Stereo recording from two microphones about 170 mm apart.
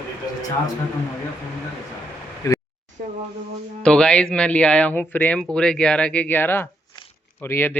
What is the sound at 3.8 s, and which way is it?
Speech, 5° left (ahead or behind).